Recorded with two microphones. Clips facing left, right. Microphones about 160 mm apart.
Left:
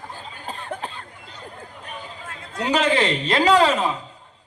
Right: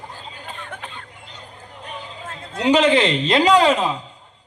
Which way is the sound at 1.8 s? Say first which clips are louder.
Right 4 dB; 25° right (ahead or behind).